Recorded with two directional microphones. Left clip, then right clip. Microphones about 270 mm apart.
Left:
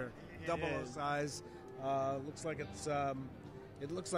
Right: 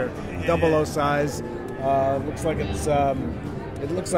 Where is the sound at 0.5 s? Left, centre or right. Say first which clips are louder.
Right 18 dB; left.